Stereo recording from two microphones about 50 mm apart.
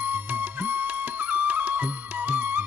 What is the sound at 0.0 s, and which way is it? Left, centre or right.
Music, right.